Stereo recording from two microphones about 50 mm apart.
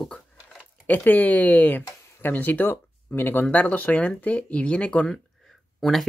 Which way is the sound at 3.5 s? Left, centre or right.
Left.